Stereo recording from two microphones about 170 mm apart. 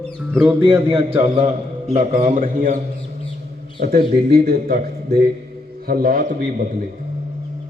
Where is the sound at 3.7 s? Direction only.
60° right (ahead or behind).